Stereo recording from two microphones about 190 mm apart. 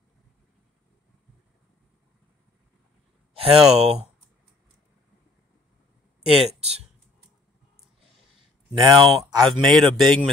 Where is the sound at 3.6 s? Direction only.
Centre (ahead or behind).